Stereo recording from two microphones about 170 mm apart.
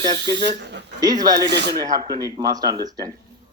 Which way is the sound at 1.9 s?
20° right (ahead or behind).